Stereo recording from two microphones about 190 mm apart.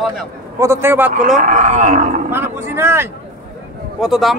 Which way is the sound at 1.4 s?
40° right (ahead or behind).